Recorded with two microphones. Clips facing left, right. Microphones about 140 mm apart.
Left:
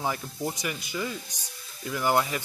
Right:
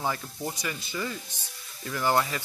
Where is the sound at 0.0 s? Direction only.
10° left (ahead or behind).